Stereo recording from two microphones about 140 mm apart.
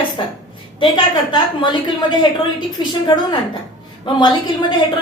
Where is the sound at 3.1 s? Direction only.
30° left (ahead or behind).